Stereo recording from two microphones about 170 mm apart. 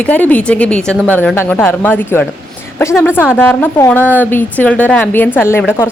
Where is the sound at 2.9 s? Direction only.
Centre (ahead or behind).